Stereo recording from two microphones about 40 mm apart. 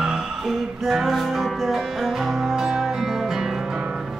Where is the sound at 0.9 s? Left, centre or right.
Centre.